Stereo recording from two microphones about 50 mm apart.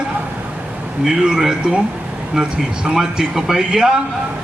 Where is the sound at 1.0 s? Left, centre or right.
Centre.